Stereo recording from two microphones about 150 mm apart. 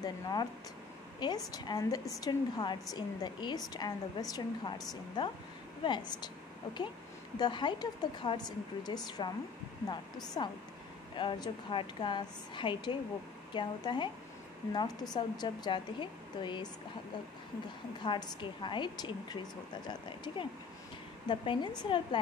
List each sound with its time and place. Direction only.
0.0 s a woman's voice: 25° left (ahead or behind)
1.5 s a woman's voice: 25° left (ahead or behind)
10.4 s a woman's voice: 35° left (ahead or behind)
15.1 s a woman's voice: 30° left (ahead or behind)
18.0 s a woman's voice: 30° left (ahead or behind)